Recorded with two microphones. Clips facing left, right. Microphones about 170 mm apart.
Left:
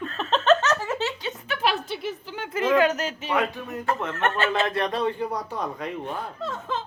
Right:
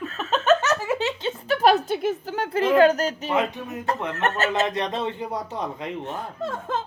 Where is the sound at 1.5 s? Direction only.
45° right (ahead or behind).